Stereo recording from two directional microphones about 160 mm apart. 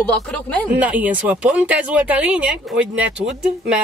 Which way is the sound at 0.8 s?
10° right (ahead or behind).